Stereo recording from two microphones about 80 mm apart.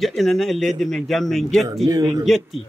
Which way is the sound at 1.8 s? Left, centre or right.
Right.